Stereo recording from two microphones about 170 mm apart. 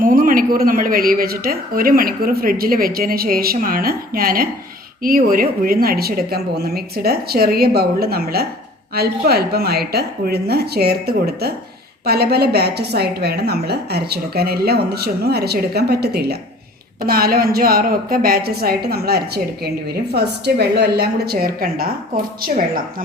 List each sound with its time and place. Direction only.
0.0 s a woman's voice: 55° right (ahead or behind)